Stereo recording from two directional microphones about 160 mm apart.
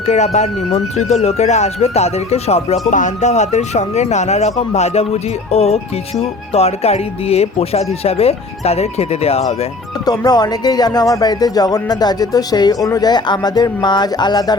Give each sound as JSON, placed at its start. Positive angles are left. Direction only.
{"t": 0.0, "sound": "speech", "side_deg": 45}
{"t": 5.5, "sound": "music", "side_deg": 40}
{"t": 10.1, "sound": "speech", "side_deg": 25}